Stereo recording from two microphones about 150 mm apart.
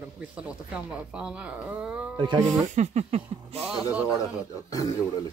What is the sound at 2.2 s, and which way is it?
Speech, 30° right (ahead or behind).